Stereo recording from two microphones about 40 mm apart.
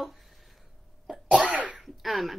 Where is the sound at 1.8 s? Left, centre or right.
Centre.